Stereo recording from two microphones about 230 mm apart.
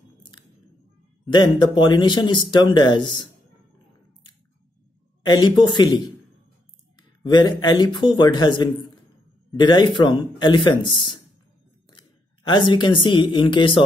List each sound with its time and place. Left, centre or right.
1.2 s a man's voice: centre
5.2 s a man's voice: centre
7.0 s a man's voice: centre
12.4 s a man's voice: centre